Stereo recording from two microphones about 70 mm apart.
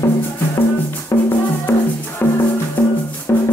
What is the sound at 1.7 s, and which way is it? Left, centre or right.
Music, left.